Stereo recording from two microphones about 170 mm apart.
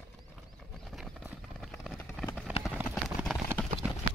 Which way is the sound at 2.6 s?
Centre (ahead or behind).